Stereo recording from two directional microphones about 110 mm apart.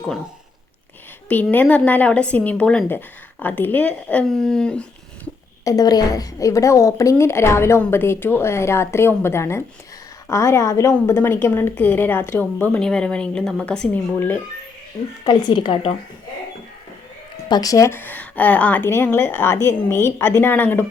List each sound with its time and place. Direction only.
1.3 s speech: 15° left (ahead or behind)
5.6 s speech: 35° left (ahead or behind); by 14.4 s 15° left (ahead or behind)
15.2 s speech: 45° left (ahead or behind)
17.5 s speech: 35° left (ahead or behind); by 20.8 s 15° left (ahead or behind)